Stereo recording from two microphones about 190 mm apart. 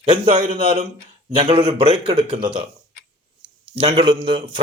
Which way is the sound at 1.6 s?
30° right (ahead or behind).